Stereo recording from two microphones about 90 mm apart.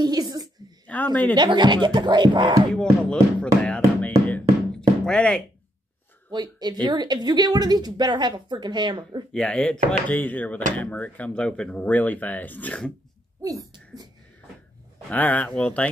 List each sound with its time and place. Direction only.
0.0 s a sound: 45° right (ahead or behind)
0.8 s speech: 20° left (ahead or behind)
1.3 s music: 55° right (ahead or behind)
2.7 s speech: 10° left (ahead or behind)
3.6 s music: 15° left (ahead or behind)
6.3 s speech: 50° right (ahead or behind)
9.3 s speech: 10° left (ahead or behind)
13.4 s speech: 40° right (ahead or behind)
15.0 s speech: 15° left (ahead or behind)